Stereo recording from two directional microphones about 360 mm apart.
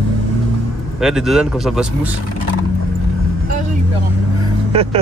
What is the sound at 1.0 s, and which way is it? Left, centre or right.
Speech, centre.